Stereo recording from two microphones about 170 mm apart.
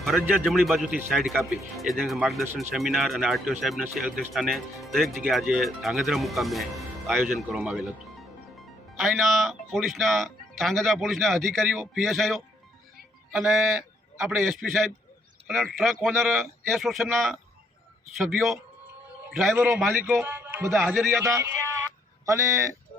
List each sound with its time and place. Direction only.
0.3 s a man's voice: centre (ahead or behind)
19.5 s a man's voice: 10° right (ahead or behind)